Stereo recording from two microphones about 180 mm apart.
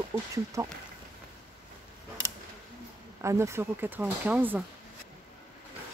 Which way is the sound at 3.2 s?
15° right (ahead or behind).